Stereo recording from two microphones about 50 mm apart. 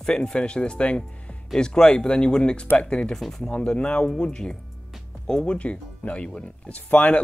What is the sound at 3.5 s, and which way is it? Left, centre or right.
Speech, left.